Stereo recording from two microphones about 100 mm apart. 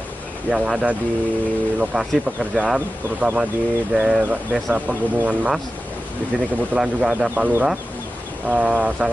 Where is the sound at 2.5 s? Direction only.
10° right (ahead or behind).